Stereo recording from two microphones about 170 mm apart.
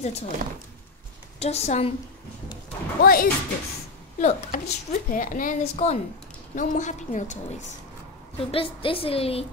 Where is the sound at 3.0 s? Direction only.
60° left (ahead or behind).